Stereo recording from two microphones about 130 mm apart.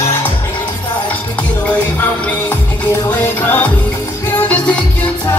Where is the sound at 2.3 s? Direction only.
15° left (ahead or behind).